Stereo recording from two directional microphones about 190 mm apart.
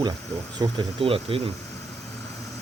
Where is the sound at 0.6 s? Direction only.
25° right (ahead or behind).